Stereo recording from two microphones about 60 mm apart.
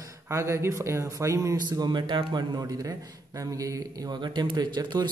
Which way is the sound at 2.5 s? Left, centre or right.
Right.